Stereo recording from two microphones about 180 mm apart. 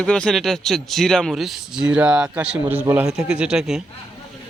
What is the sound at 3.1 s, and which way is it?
Speech, 5° right (ahead or behind).